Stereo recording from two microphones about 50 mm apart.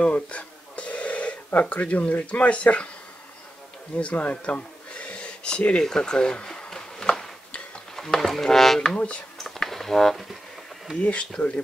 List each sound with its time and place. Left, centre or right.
0.0 s speech: left
3.9 s a sound: left
8.2 s speech: centre
8.9 s speech: left
9.4 s a sound: centre
11.0 s speech: left